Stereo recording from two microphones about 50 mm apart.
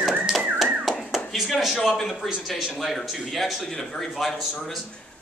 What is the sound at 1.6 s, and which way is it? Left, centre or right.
Speech, centre.